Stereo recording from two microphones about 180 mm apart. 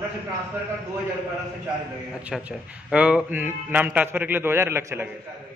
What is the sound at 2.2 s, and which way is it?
A man's voice, 5° right (ahead or behind).